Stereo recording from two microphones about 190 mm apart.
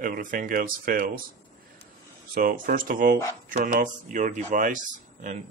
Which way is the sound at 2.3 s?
45° right (ahead or behind).